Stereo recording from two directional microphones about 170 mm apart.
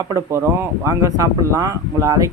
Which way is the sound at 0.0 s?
15° right (ahead or behind).